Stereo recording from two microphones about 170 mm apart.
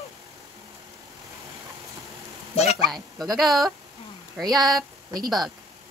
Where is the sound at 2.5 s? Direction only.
35° left (ahead or behind).